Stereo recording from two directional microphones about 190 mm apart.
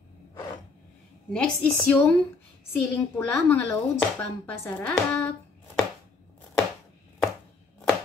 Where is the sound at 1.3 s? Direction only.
5° left (ahead or behind).